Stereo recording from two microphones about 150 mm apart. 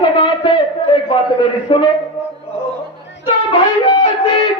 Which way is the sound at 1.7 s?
35° left (ahead or behind).